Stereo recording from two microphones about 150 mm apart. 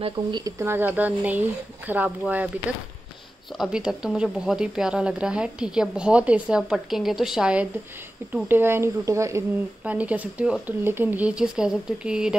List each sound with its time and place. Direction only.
0.0 s speech: 30° right (ahead or behind)
0.6 s speech: 15° right (ahead or behind)
3.5 s speech: 5° right (ahead or behind)